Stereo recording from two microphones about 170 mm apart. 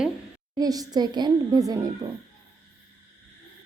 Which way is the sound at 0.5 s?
20° right (ahead or behind).